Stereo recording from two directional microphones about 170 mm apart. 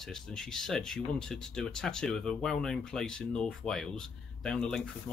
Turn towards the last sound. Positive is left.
turn(degrees=5)  # may be behind; listen again after turning